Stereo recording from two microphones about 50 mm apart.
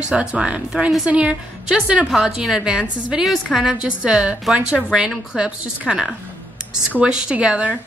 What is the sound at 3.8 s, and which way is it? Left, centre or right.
A woman's voice, centre.